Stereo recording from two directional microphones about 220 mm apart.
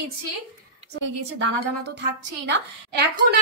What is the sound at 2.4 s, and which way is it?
Speech, 50° right (ahead or behind).